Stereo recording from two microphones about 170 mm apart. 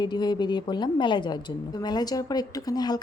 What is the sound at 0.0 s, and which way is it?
A woman's voice, 25° left (ahead or behind).